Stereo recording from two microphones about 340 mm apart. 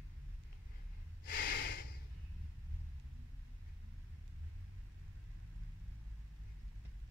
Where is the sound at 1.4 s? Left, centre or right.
Left.